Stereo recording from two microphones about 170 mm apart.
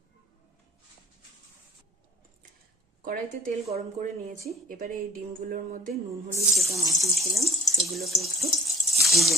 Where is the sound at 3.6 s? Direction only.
40° right (ahead or behind).